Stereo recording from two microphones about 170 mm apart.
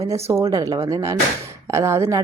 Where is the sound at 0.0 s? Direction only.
15° right (ahead or behind).